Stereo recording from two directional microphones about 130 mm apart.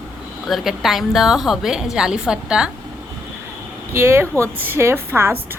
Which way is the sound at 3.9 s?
20° right (ahead or behind).